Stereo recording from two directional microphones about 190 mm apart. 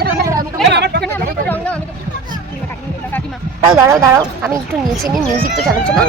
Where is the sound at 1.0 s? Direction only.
10° left (ahead or behind).